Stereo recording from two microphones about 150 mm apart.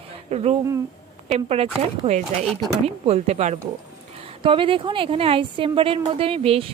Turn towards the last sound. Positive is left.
turn(degrees=-40)  # may be behind; listen again after turning